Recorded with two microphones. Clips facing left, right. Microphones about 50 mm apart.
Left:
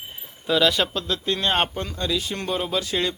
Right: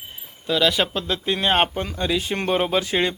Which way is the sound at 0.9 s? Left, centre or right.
Centre.